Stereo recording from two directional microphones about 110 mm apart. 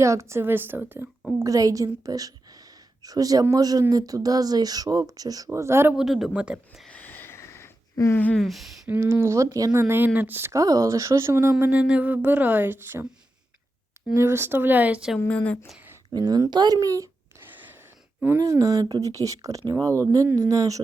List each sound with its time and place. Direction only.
0.0 s speech: 25° right (ahead or behind)
1.4 s a woman's voice: 30° right (ahead or behind)
5.5 s speech: 25° right (ahead or behind)
6.0 s speech: 5° right (ahead or behind)
6.8 s a sound: 15° left (ahead or behind)
8.4 s speech: centre (ahead or behind)
8.9 s speech: 20° right (ahead or behind)
9.8 s speech: 15° right (ahead or behind)
11.6 s speech: 15° right (ahead or behind)
14.1 s speech: 20° right (ahead or behind)
15.3 s speech: 10° left (ahead or behind)
16.0 s speech: 35° right (ahead or behind)
18.3 s speech: 30° right (ahead or behind)